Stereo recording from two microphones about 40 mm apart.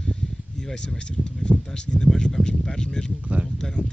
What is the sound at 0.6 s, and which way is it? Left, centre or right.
Speech, centre.